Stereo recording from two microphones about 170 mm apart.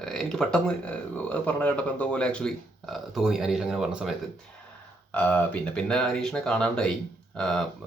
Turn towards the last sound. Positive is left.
turn(degrees=5)  # may be behind; listen again after turning